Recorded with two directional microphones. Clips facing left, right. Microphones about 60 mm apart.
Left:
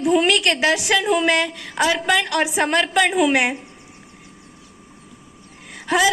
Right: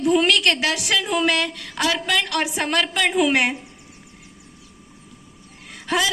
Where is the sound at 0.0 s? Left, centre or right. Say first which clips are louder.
Left 1 dB; centre.